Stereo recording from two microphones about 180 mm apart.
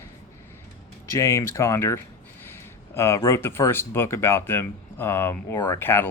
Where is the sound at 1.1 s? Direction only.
15° left (ahead or behind).